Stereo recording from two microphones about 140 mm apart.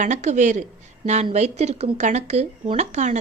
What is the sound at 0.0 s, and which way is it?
A woman's voice, 60° right (ahead or behind).